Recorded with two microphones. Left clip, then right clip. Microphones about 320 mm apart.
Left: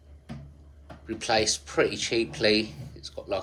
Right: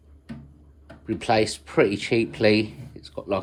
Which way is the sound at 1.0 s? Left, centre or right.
Centre.